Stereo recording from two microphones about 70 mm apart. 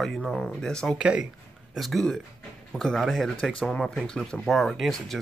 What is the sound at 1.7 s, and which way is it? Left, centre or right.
Speech, centre.